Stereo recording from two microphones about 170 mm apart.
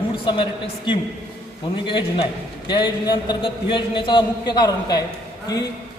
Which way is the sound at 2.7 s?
25° left (ahead or behind).